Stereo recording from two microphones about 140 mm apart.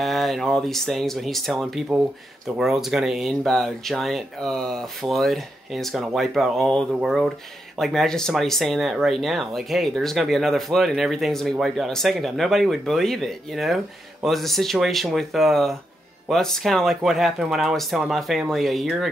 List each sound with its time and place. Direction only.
0.0 s speech: centre (ahead or behind)